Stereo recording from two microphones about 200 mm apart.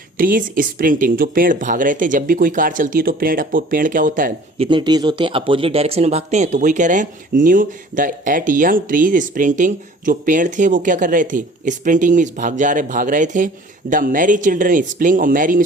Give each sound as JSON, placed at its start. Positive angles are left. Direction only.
{"t": 0.2, "sound": "speech", "side_deg": -45}